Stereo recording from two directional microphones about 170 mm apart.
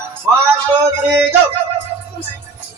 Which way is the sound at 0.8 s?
10° right (ahead or behind).